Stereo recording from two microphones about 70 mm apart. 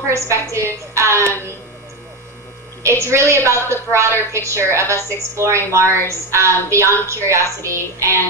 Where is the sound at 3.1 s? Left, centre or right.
Right.